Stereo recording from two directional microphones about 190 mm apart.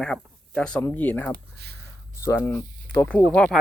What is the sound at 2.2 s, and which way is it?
Speech, 15° left (ahead or behind).